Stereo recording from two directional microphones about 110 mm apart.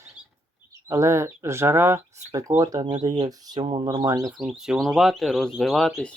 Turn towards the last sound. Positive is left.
turn(degrees=0)  # may be behind; listen again after turning